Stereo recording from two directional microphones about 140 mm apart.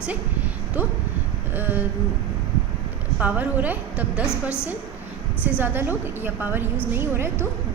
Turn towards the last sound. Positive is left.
turn(degrees=-15)  # may be behind; listen again after turning